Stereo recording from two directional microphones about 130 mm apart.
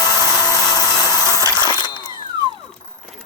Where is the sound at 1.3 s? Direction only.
25° right (ahead or behind).